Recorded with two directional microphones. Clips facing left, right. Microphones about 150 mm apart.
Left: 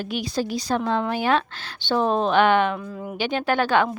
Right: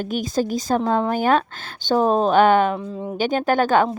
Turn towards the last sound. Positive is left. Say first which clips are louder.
# right 3 dB
turn(degrees=-45)  # may be behind; listen again after turning